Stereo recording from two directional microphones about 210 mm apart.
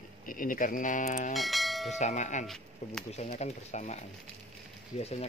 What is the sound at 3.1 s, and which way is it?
Speech, 30° left (ahead or behind).